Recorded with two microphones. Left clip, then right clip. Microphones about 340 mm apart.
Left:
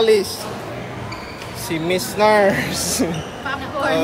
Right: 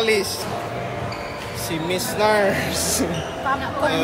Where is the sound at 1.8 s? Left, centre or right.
Left.